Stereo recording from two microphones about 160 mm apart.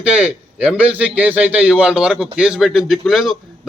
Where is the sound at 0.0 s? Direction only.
5° right (ahead or behind).